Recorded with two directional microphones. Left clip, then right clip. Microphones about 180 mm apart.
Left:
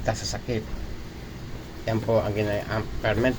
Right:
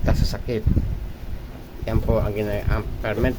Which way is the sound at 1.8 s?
25° right (ahead or behind).